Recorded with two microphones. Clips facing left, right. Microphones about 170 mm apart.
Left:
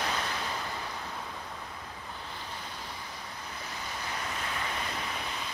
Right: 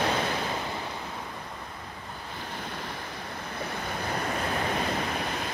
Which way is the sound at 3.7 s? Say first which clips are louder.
Right 6 dB; 55° right (ahead or behind).